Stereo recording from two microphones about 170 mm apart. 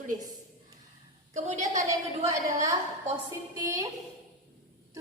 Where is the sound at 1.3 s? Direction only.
45° right (ahead or behind).